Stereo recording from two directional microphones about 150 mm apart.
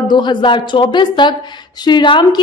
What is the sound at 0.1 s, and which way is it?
A woman's voice, 30° left (ahead or behind).